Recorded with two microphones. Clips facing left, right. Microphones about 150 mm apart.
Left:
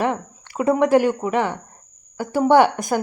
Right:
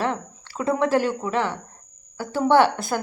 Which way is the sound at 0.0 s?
15° left (ahead or behind).